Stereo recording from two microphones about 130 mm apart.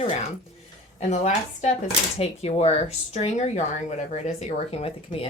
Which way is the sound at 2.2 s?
50° left (ahead or behind).